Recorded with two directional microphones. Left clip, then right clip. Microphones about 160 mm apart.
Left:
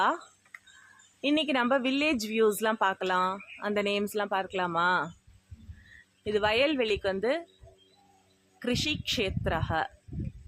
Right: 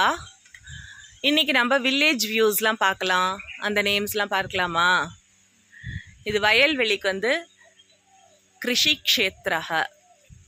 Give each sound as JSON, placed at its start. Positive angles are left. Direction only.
{"t": 0.0, "sound": "speech", "side_deg": -20}
{"t": 6.2, "sound": "speech", "side_deg": -10}
{"t": 8.5, "sound": "speech", "side_deg": -10}